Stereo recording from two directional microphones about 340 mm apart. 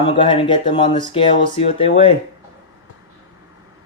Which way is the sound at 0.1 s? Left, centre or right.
Centre.